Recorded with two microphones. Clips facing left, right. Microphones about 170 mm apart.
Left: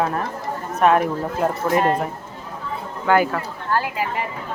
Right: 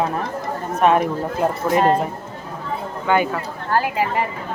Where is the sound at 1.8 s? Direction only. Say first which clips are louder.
Right 4 dB; 30° right (ahead or behind).